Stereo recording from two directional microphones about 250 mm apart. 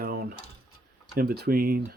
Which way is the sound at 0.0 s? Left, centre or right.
Right.